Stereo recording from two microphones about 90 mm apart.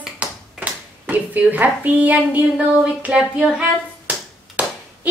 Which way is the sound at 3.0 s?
10° right (ahead or behind).